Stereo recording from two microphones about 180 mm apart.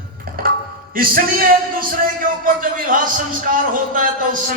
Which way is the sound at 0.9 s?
55° right (ahead or behind).